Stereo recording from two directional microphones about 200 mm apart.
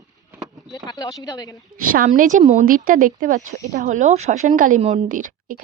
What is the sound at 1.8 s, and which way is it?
A woman's voice, 45° right (ahead or behind).